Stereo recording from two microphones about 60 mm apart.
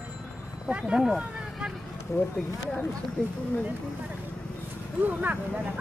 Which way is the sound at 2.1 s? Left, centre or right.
Left.